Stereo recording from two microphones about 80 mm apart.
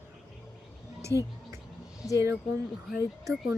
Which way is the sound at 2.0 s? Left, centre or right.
Centre.